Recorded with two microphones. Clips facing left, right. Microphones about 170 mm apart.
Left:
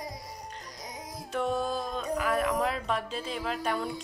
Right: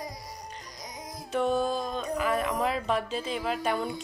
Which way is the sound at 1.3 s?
Centre (ahead or behind).